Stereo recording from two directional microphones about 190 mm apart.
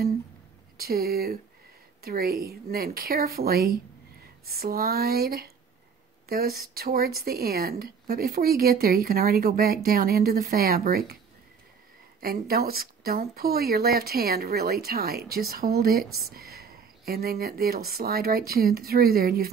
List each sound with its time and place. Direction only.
0.7 s speech: 55° right (ahead or behind)
12.2 s speech: 50° right (ahead or behind)